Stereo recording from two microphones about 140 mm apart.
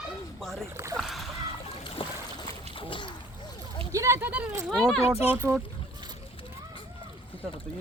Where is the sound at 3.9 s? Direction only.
20° right (ahead or behind).